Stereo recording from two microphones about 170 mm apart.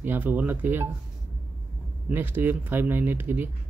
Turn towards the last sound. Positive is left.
turn(degrees=-10)  # may be behind; listen again after turning